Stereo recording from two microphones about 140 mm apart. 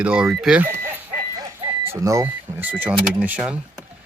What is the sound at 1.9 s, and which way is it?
Speech, 20° right (ahead or behind).